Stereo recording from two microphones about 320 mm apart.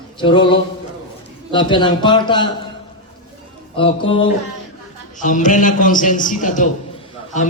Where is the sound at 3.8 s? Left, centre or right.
Centre.